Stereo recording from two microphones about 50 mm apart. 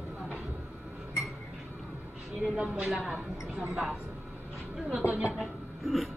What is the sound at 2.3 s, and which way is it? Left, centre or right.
Speech, centre.